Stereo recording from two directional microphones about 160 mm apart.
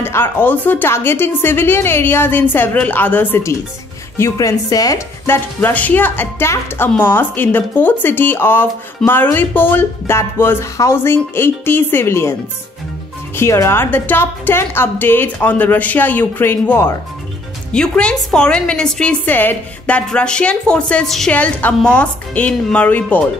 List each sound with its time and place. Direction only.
0.0 s speech: 15° left (ahead or behind)
13.4 s speech: 15° left (ahead or behind)